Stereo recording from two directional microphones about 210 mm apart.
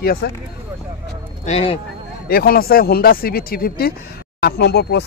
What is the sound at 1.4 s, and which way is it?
Speech, 30° left (ahead or behind).